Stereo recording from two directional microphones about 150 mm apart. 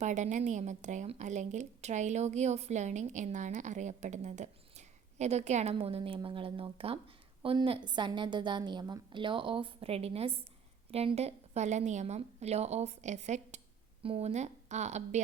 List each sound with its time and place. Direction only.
0.0 s a woman's voice: 55° right (ahead or behind)
5.7 s a woman's voice: 40° right (ahead or behind)